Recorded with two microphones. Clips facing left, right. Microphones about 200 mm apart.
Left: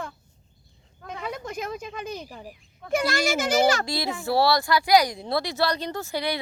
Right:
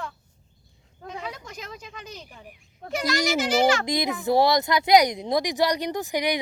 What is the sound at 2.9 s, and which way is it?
Speech, 50° left (ahead or behind).